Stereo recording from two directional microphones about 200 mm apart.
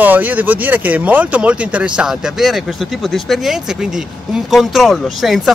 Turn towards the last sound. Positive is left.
turn(degrees=0)  # may be behind; listen again after turning